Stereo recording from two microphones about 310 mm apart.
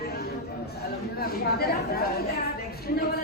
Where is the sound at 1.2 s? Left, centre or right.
Left.